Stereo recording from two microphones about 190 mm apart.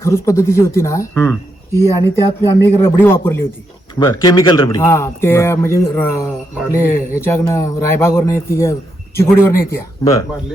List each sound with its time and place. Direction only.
0.0 s speech: 15° left (ahead or behind)
4.8 s speech: 15° left (ahead or behind)